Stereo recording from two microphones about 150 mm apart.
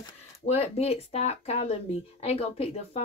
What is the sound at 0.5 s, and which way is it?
Speech, 45° left (ahead or behind).